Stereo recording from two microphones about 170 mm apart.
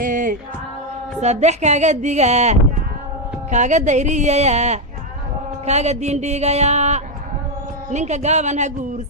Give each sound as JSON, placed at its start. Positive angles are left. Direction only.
{"t": 0.0, "sound": "music", "side_deg": -50}
{"t": 1.2, "sound": "speech", "side_deg": -40}